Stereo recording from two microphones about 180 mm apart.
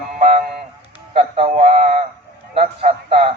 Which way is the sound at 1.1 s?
35° right (ahead or behind).